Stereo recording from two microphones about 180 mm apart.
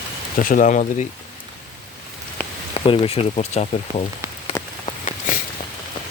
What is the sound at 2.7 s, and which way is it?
Speech, 30° left (ahead or behind).